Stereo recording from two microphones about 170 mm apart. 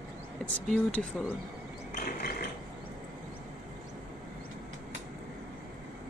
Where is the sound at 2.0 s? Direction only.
65° left (ahead or behind).